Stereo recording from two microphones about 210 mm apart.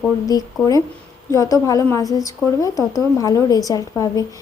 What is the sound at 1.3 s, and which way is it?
Speech, 15° left (ahead or behind).